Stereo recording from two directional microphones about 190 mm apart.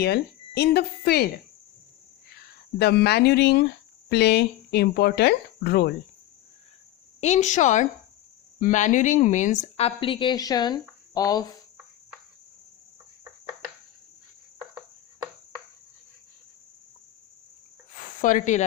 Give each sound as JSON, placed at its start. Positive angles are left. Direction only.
{"t": 0.0, "sound": "speech", "side_deg": 60}
{"t": 2.3, "sound": "speech", "side_deg": 60}
{"t": 7.2, "sound": "a woman's voice", "side_deg": 35}
{"t": 17.9, "sound": "a sound", "side_deg": 45}